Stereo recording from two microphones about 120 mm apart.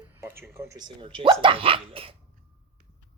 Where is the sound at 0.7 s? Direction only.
40° right (ahead or behind).